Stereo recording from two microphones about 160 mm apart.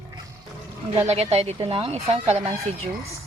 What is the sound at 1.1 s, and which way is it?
Speech, 40° right (ahead or behind).